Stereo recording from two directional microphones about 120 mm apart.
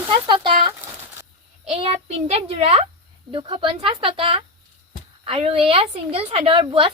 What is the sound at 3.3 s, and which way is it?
A woman's voice, 45° right (ahead or behind).